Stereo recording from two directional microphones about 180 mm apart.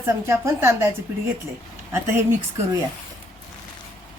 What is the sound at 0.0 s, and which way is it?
Speech, 15° right (ahead or behind).